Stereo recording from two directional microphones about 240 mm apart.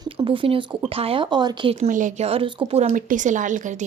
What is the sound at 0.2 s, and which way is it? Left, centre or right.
Speech, right.